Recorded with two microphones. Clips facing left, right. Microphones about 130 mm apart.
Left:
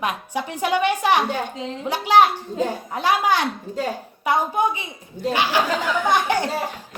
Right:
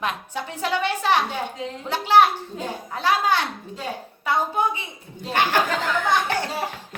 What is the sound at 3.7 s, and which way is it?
Speech, 40° left (ahead or behind).